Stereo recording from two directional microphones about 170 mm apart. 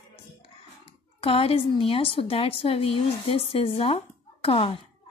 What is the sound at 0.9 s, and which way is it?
Speech, 35° left (ahead or behind).